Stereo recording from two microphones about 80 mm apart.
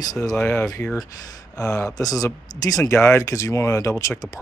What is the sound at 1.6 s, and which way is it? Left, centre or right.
Speech, left.